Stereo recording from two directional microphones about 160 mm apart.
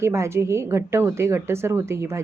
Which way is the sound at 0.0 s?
15° right (ahead or behind).